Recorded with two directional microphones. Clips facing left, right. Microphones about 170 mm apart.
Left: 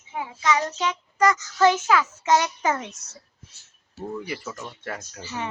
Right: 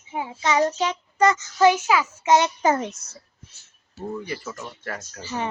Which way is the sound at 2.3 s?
30° right (ahead or behind).